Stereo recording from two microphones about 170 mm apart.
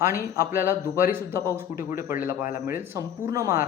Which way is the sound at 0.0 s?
15° right (ahead or behind).